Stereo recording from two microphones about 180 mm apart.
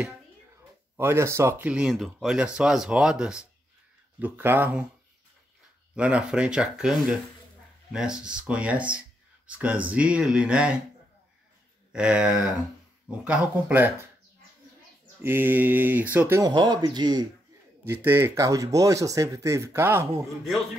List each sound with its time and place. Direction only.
0.9 s speech: 15° right (ahead or behind)
5.9 s speech: 5° right (ahead or behind)
11.9 s speech: 5° right (ahead or behind)
15.2 s speech: 10° right (ahead or behind)
17.8 s speech: 10° right (ahead or behind)